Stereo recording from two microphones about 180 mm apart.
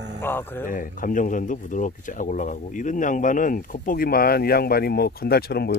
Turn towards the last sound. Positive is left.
turn(degrees=60)  # may be behind; listen again after turning